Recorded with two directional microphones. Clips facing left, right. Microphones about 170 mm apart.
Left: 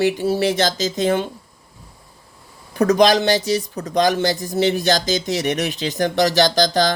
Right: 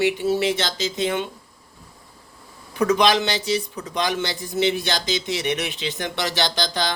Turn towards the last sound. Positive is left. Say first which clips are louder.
# left 8 dB
turn(degrees=40)  # may be behind; listen again after turning